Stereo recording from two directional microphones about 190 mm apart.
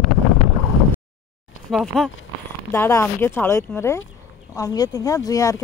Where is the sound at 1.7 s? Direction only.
Centre (ahead or behind).